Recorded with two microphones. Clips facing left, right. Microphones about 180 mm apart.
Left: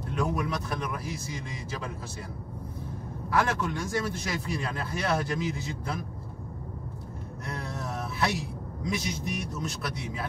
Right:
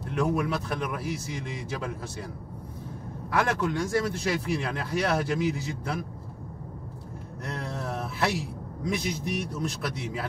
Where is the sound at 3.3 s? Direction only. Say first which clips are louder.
Right 1 dB; 65° right (ahead or behind).